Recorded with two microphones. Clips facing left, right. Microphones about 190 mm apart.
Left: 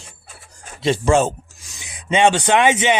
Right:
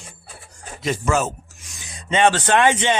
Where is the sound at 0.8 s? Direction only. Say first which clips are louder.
Left 5 dB; 30° left (ahead or behind).